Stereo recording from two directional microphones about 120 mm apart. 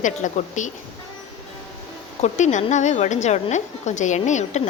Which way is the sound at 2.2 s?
85° left.